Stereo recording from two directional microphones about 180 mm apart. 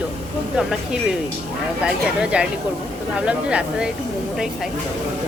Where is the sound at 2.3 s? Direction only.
5° right (ahead or behind).